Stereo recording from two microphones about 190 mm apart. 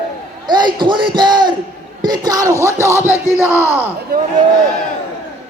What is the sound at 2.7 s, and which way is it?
Music, 15° right (ahead or behind).